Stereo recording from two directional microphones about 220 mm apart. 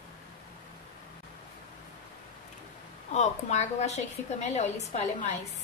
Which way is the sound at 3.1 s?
30° left (ahead or behind).